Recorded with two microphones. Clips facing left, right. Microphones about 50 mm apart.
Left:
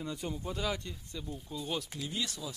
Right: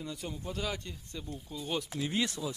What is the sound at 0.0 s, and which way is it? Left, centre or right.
Speech, centre.